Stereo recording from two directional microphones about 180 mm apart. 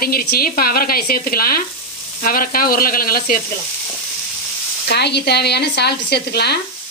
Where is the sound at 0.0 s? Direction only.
55° left (ahead or behind).